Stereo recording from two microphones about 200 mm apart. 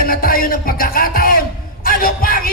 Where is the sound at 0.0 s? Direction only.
45° left (ahead or behind).